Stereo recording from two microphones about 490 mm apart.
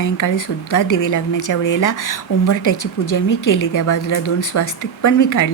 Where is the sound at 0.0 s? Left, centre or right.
Left.